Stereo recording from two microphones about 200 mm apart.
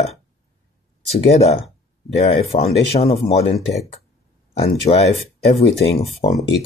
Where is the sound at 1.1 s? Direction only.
30° left (ahead or behind).